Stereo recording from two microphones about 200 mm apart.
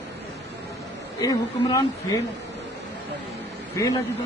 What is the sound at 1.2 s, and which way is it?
Speech, 15° left (ahead or behind).